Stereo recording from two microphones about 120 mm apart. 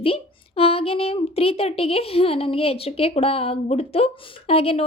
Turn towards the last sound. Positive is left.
turn(degrees=55)  # may be behind; listen again after turning